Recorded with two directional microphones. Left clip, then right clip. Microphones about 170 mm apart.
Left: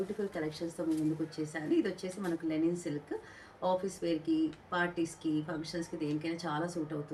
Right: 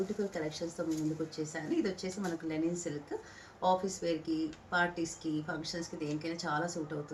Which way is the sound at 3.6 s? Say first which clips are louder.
Right 2 dB; 20° left (ahead or behind).